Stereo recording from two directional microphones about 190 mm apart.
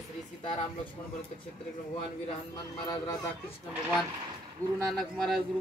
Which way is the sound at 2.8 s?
20° left (ahead or behind).